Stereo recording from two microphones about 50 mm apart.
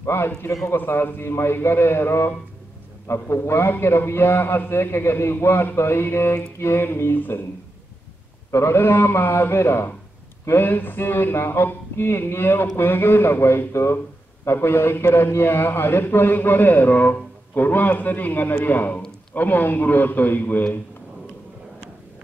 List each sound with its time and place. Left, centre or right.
0.0 s a man's voice: left
3.1 s a man's voice: left
3.4 s a man's voice: left
8.5 s a man's voice: left
8.7 s a man's voice: left
10.5 s a man's voice: left